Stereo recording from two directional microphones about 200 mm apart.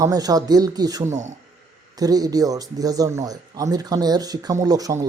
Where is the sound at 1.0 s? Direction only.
35° right (ahead or behind).